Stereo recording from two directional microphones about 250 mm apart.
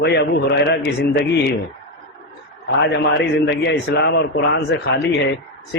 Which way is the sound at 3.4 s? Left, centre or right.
Left.